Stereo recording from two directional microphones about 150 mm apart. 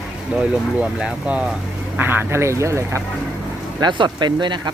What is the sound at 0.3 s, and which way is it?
Speech, 5° right (ahead or behind).